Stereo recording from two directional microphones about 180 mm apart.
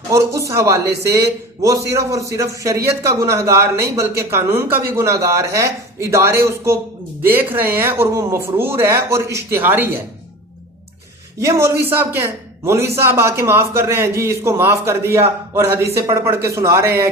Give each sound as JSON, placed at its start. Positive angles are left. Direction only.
{"t": 0.1, "sound": "a man's voice", "side_deg": -15}
{"t": 11.3, "sound": "a man's voice", "side_deg": -15}